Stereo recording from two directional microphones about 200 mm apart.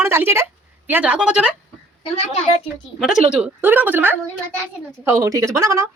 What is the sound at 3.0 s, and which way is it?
Speech, 5° right (ahead or behind).